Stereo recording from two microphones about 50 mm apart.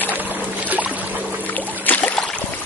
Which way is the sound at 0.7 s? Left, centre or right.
Right.